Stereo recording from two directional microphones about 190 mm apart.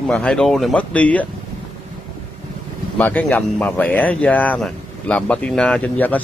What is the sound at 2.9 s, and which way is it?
Speech, 10° left (ahead or behind).